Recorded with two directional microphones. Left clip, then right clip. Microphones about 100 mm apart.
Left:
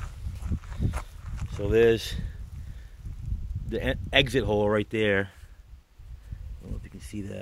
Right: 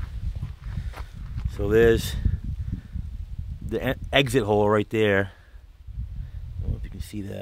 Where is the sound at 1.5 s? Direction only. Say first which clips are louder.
Right 3 dB; 80° right.